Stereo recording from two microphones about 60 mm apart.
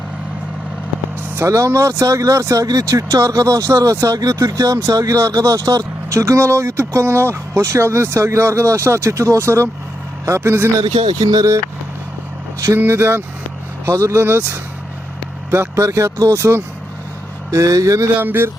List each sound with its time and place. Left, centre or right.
1.4 s speech: right
4.9 s speech: right
10.8 s speech: right
12.8 s speech: right
17.5 s speech: right
18.2 s speech: right